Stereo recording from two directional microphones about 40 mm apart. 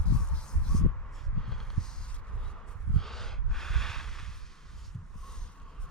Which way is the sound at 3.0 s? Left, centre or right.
Centre.